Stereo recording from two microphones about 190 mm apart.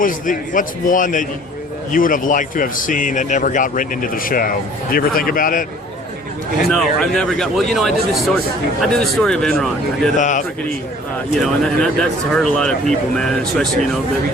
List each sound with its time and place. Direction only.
0.0 s a man's voice: 45° left (ahead or behind)
6.7 s speech: centre (ahead or behind)
10.2 s a man's voice: 40° left (ahead or behind)
11.3 s speech: centre (ahead or behind)